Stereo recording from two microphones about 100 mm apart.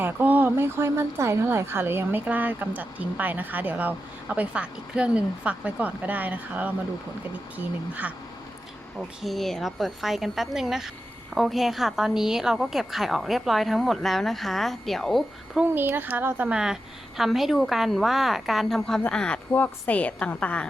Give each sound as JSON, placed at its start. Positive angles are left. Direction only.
{"t": 0.0, "sound": "speech", "side_deg": -20}
{"t": 9.2, "sound": "a woman's voice", "side_deg": 0}
{"t": 15.7, "sound": "speech", "side_deg": -20}
{"t": 17.2, "sound": "a woman's voice", "side_deg": 0}